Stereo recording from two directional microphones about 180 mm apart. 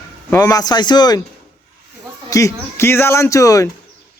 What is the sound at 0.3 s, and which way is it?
Speech, 20° left (ahead or behind).